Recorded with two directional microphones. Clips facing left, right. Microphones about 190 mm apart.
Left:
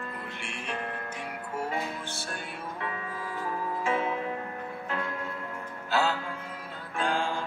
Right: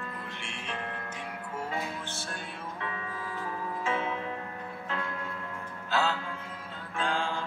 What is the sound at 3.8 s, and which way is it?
Music, 10° left (ahead or behind).